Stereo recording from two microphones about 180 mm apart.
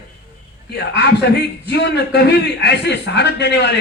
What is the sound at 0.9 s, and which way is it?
A man's voice, 70° left (ahead or behind).